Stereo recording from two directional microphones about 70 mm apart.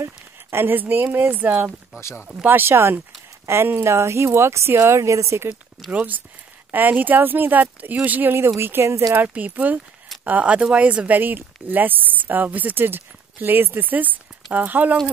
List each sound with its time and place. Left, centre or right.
0.0 s a sound: right
1.1 s speech: right
2.0 s speech: left
2.4 s speech: right
5.9 s speech: right